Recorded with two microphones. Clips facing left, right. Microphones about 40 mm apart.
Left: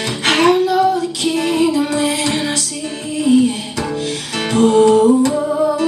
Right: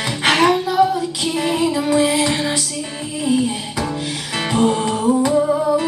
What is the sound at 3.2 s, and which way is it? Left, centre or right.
Music, centre.